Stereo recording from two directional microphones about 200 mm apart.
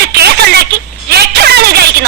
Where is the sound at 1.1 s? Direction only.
55° right (ahead or behind).